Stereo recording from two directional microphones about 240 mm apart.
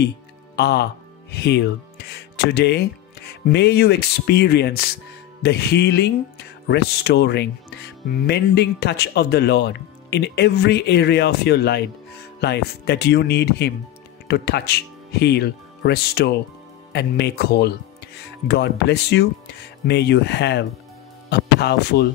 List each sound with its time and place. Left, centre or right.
0.6 s speech: left